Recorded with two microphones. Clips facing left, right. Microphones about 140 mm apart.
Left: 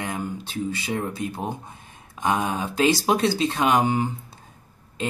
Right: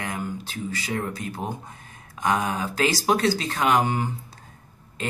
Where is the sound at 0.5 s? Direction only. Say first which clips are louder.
Left 3 dB; 20° left (ahead or behind).